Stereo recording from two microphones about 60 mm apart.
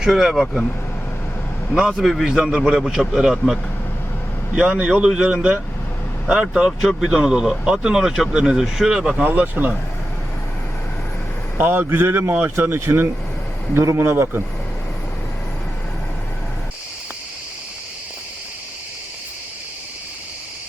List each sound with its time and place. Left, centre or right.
0.0 s a man's voice: centre
2.0 s a man's voice: centre
4.5 s speech: centre
9.2 s speech: right
11.5 s speech: right
12.9 s speech: right